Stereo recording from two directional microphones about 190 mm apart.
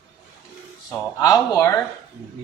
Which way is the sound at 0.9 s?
15° left (ahead or behind).